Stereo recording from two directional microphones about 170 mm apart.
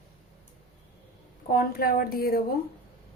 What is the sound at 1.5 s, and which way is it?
Speech, 60° left (ahead or behind).